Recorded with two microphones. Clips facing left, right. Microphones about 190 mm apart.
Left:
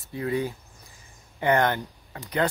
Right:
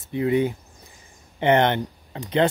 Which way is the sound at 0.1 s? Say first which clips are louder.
Right 6 dB; 20° right (ahead or behind).